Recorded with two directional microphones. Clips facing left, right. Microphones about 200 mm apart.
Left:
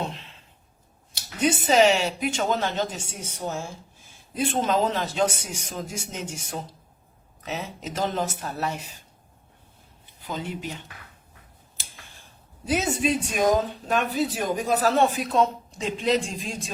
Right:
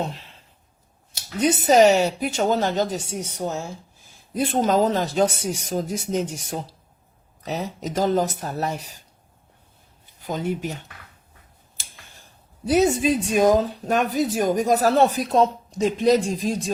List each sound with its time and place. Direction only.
0.0 s a sound: 40° right (ahead or behind)
1.1 s speech: 40° right (ahead or behind)
10.2 s speech: 45° right (ahead or behind)
12.6 s speech: 35° right (ahead or behind)